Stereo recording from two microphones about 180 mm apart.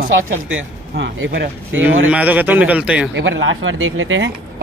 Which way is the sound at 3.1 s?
90° right.